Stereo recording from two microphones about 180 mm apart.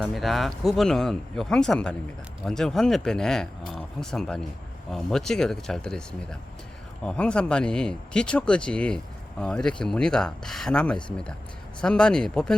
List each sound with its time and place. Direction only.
0.0 s speech: centre (ahead or behind)